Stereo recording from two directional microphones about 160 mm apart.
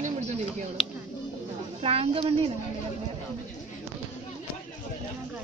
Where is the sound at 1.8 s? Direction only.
35° right (ahead or behind).